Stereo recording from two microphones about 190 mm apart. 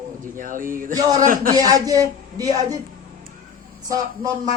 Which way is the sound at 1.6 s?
20° right (ahead or behind).